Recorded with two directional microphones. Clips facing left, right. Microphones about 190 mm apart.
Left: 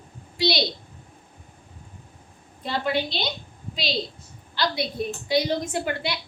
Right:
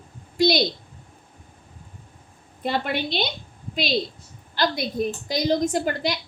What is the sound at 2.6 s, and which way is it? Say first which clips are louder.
Speech: even; 55° right (ahead or behind).